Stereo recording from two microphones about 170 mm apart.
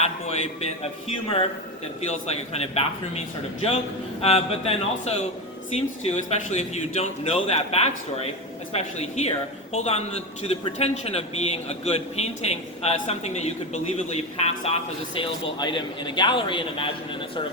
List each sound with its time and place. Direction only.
0.0 s a man's voice: 40° left (ahead or behind)